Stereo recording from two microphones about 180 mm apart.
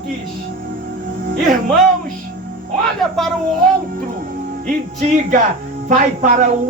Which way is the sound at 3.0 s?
Centre (ahead or behind).